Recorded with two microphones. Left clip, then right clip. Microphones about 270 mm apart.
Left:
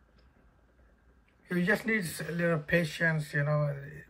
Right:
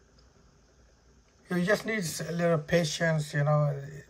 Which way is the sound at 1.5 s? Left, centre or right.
Centre.